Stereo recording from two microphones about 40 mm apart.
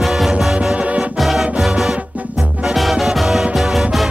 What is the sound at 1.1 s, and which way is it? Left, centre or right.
Music, centre.